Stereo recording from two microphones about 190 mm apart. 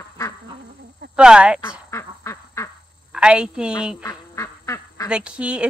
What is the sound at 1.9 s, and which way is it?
Duck, 15° left (ahead or behind).